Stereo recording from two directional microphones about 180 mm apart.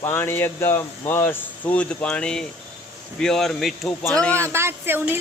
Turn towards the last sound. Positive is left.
turn(degrees=-10)  # may be behind; listen again after turning